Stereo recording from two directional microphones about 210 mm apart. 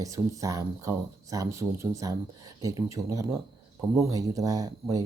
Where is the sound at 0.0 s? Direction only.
15° right (ahead or behind).